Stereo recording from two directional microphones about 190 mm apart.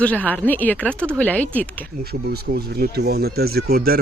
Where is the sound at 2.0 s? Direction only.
55° right (ahead or behind).